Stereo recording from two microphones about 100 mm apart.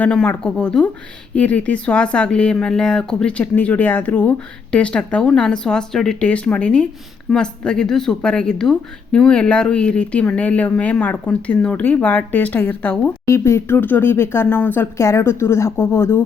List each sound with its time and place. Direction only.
0.0 s speech: 10° left (ahead or behind)
13.2 s speech: 25° left (ahead or behind)